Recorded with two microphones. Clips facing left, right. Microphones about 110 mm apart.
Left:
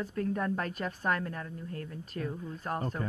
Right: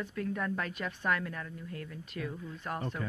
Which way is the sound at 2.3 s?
25° left (ahead or behind).